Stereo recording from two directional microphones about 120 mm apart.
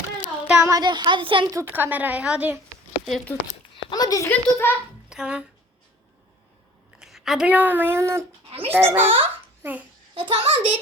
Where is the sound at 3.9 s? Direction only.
30° left (ahead or behind).